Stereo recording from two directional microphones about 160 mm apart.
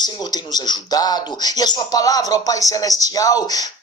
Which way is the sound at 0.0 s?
25° left (ahead or behind).